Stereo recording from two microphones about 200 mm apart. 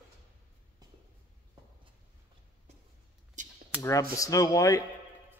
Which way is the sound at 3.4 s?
40° right (ahead or behind).